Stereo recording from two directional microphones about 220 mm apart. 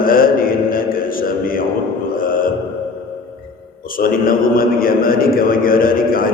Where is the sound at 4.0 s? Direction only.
40° left (ahead or behind).